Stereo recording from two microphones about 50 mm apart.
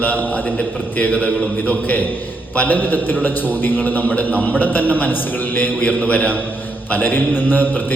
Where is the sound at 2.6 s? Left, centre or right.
Left.